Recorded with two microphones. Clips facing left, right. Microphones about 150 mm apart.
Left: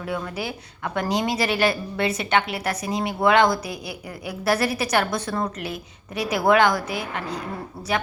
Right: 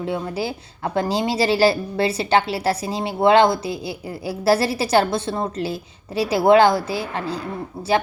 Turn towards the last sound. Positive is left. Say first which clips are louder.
# right 3 dB
turn(degrees=-20)  # may be behind; listen again after turning